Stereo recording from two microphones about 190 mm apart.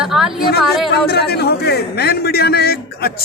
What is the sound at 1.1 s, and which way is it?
A man's voice, 55° left (ahead or behind).